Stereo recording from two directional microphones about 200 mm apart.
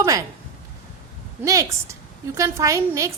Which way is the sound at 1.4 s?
15° right (ahead or behind).